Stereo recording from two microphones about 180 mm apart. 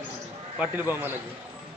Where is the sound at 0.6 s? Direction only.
10° right (ahead or behind).